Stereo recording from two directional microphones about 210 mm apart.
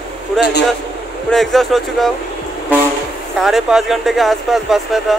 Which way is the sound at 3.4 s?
Centre (ahead or behind).